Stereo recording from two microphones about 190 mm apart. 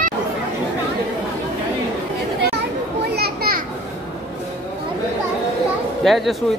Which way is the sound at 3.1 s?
55° right (ahead or behind).